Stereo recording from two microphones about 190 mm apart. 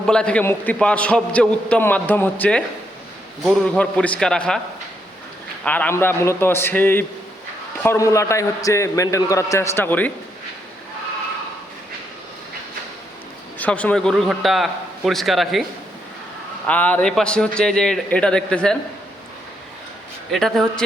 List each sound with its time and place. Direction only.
0.1 s a man's voice: 5° left (ahead or behind)
5.6 s a man's voice: 10° left (ahead or behind)
13.6 s a man's voice: 10° left (ahead or behind)
16.6 s a man's voice: 5° left (ahead or behind)
20.3 s a man's voice: centre (ahead or behind)